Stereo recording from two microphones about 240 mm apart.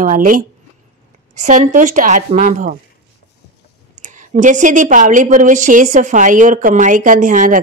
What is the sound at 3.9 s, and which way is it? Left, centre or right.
A woman's voice, right.